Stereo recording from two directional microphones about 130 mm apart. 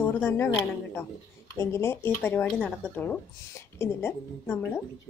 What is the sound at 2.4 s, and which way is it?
Speech, 5° left (ahead or behind).